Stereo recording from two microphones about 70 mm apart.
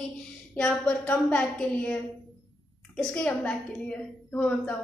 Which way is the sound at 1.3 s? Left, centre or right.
Centre.